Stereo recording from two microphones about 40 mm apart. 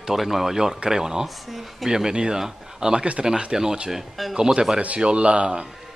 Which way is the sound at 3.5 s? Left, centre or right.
Centre.